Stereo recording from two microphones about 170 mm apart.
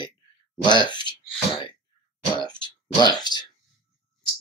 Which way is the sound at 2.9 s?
25° left (ahead or behind).